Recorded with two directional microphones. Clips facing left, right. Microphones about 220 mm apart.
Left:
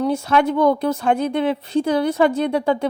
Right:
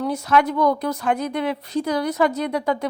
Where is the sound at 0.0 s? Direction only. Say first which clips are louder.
Left 2 dB; 25° left (ahead or behind).